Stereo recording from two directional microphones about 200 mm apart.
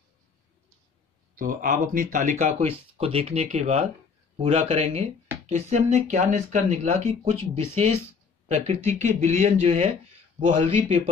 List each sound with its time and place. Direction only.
1.3 s speech: 45° right (ahead or behind); by 11.0 s 25° right (ahead or behind)